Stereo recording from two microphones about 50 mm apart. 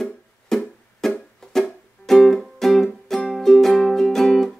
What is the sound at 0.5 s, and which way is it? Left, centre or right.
Music, centre.